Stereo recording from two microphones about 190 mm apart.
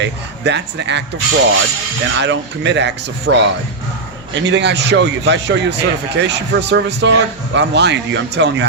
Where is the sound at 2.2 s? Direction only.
70° right (ahead or behind).